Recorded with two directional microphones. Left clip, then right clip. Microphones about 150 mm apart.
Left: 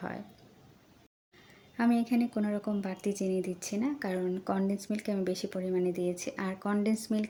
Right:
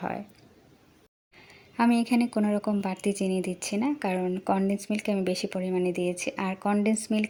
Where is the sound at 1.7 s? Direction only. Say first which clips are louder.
Right 5 dB; 25° right (ahead or behind).